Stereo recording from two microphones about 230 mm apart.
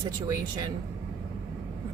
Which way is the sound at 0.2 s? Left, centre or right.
Centre.